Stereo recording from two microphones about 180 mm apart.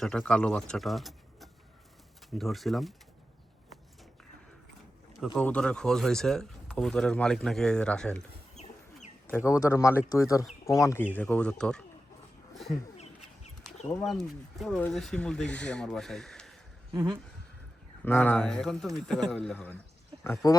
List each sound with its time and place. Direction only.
0.0 s speech: 5° left (ahead or behind)
5.4 s speech: 5° left (ahead or behind)
8.6 s chicken: 40° left (ahead or behind)
9.3 s speech: 15° left (ahead or behind)
13.9 s speech: centre (ahead or behind)
16.9 s speech: 25° right (ahead or behind)
18.0 s speech: 10° left (ahead or behind)